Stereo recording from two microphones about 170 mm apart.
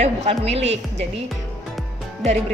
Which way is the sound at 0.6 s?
90° right.